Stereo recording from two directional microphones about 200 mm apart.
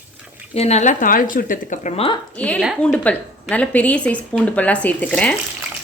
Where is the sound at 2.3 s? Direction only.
5° left (ahead or behind).